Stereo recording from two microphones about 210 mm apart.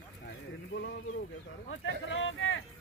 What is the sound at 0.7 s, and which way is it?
Speech, 55° left (ahead or behind).